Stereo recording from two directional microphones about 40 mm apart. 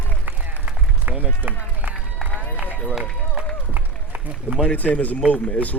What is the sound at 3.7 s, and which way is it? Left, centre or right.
Run, right.